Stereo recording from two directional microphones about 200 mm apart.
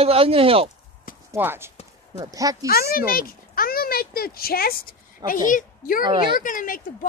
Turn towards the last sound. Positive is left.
turn(degrees=40)  # may be behind; listen again after turning